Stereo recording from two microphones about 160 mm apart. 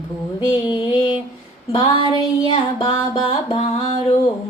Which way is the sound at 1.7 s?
35° left (ahead or behind).